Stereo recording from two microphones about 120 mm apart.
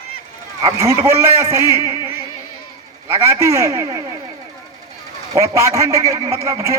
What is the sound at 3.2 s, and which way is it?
Speech, 20° right (ahead or behind).